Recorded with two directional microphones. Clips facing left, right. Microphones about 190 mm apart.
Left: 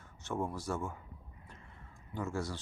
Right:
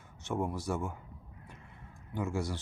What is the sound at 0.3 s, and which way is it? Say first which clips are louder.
Speech: right 3 dB; 15° right (ahead or behind).